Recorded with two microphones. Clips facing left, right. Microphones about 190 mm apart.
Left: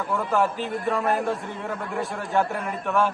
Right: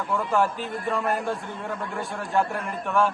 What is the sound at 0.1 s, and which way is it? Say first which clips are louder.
A man's voice: even; centre (ahead or behind).